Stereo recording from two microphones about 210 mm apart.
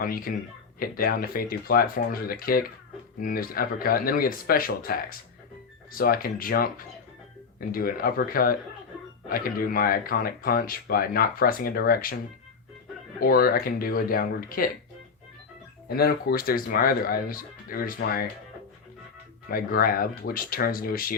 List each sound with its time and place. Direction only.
0.0 s speech: 45° left (ahead or behind)
13.1 s speech: 45° left (ahead or behind)
16.0 s speech: 45° left (ahead or behind)
19.5 s speech: 45° left (ahead or behind)